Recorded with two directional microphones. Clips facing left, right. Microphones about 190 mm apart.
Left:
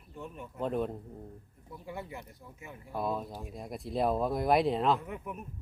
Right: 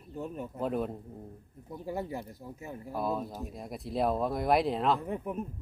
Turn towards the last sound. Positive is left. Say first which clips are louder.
# right 5 dB
turn(degrees=-35)  # may be behind; listen again after turning